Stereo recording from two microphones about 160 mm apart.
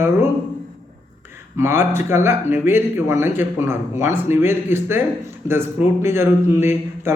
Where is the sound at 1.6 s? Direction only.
15° right (ahead or behind).